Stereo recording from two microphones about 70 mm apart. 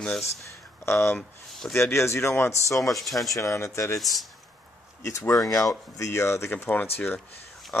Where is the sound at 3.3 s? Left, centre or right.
Left.